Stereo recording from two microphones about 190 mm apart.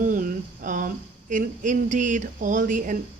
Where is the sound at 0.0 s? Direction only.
45° right (ahead or behind).